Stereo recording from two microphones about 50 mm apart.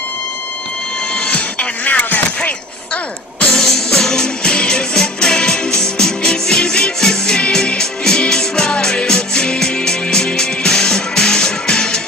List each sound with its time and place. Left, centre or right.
1.1 s music: left
3.5 s music: centre